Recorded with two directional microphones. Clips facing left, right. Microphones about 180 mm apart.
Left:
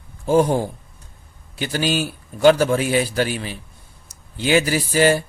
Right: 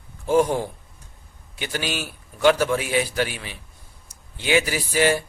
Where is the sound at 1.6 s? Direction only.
35° left (ahead or behind).